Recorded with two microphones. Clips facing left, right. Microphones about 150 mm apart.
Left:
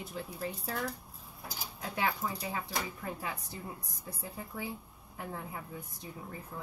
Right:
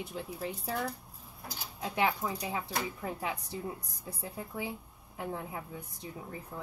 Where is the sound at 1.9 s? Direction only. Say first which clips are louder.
Right 3 dB; 15° right (ahead or behind).